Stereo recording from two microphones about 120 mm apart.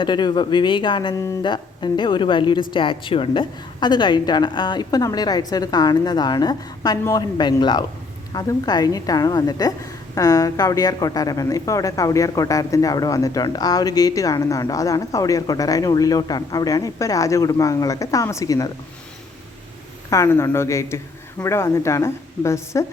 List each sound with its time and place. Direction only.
0.0 s a woman's voice: 40° left (ahead or behind)
20.1 s a woman's voice: 25° left (ahead or behind)